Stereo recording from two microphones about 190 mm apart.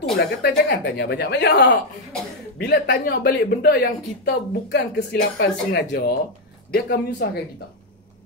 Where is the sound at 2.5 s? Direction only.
55° left (ahead or behind).